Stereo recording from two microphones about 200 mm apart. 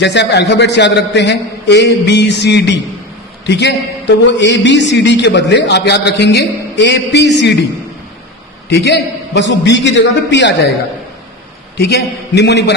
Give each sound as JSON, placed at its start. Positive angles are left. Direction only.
{"t": 0.0, "sound": "a man's voice", "side_deg": 60}
{"t": 8.7, "sound": "a man's voice", "side_deg": 55}
{"t": 11.8, "sound": "a man's voice", "side_deg": 55}